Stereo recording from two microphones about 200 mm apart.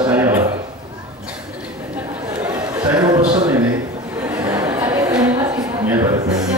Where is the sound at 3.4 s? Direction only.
10° right (ahead or behind).